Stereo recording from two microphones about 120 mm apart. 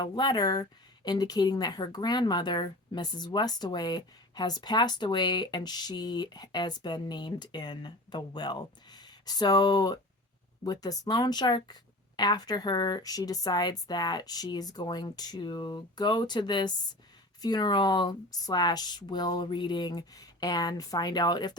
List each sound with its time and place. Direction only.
0.0 s speech: 35° left (ahead or behind)